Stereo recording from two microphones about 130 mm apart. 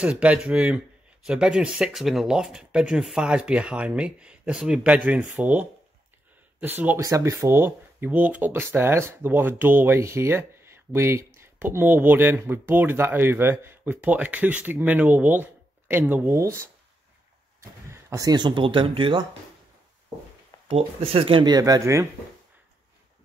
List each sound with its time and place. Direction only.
0.0 s speech: 10° right (ahead or behind)
7.1 s speech: 25° right (ahead or behind)
20.6 s speech: 50° right (ahead or behind); by 22.0 s 25° right (ahead or behind)